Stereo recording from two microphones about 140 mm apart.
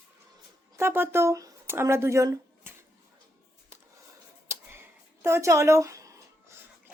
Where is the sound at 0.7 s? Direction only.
15° right (ahead or behind).